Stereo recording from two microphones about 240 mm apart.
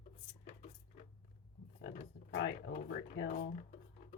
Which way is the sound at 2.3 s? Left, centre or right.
Left.